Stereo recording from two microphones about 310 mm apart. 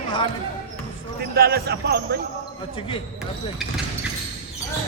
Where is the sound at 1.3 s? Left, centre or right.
Right.